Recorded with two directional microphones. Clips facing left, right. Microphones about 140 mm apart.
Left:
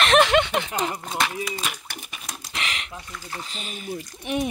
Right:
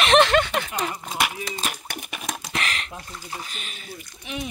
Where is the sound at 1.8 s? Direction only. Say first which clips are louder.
Right 5 dB; 55° right (ahead or behind).